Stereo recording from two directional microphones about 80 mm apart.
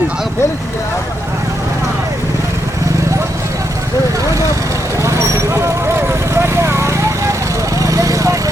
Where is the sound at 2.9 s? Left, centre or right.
Right.